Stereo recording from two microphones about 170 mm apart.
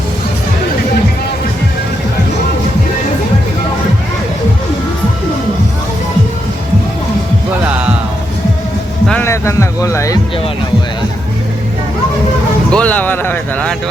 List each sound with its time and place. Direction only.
7.6 s music: 10° right (ahead or behind)
9.0 s music: 10° left (ahead or behind)
12.7 s a sound: 10° left (ahead or behind)